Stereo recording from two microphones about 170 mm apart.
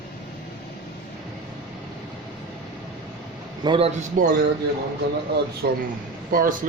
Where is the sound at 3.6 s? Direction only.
30° right (ahead or behind).